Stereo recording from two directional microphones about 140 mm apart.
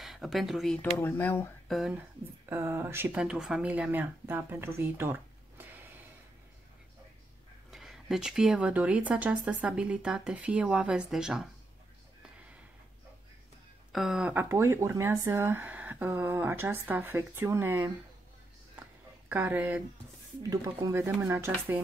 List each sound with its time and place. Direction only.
0.0 s speech: centre (ahead or behind)
0.9 s speech: 15° left (ahead or behind)
1.7 s speech: centre (ahead or behind)
2.5 s speech: 15° right (ahead or behind)
7.7 s speech: 5° right (ahead or behind)
13.9 s speech: centre (ahead or behind)
18.8 s a sound: 15° right (ahead or behind)
20.4 s speech: 25° right (ahead or behind)